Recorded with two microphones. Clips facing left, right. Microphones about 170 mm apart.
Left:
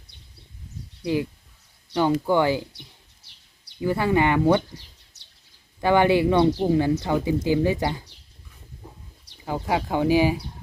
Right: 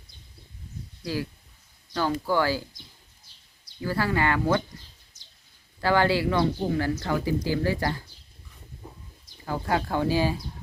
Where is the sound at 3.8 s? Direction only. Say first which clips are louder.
Left 5 dB; 20° left (ahead or behind).